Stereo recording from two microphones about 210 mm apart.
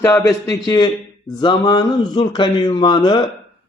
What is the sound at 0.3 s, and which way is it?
A man's voice, 20° left (ahead or behind).